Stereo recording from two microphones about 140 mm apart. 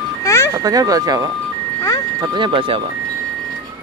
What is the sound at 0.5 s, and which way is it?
Speech, 25° right (ahead or behind).